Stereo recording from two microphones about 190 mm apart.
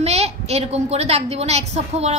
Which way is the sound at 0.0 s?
35° right (ahead or behind).